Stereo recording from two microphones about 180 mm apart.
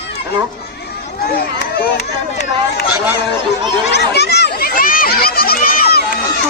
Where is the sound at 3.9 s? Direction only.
65° left (ahead or behind).